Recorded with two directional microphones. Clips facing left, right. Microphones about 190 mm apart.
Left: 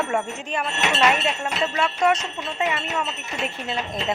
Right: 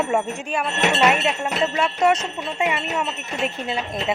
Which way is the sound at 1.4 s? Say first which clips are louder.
Right 2 dB; 20° right (ahead or behind).